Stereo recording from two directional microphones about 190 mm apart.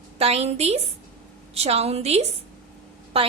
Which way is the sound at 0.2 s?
35° right (ahead or behind).